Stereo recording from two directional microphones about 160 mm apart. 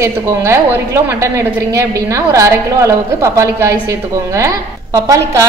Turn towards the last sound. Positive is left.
turn(degrees=-20)  # may be behind; listen again after turning